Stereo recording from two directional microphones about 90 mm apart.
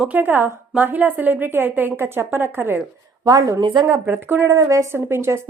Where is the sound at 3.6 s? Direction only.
60° right (ahead or behind).